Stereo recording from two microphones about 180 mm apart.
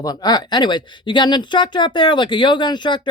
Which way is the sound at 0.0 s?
20° left (ahead or behind).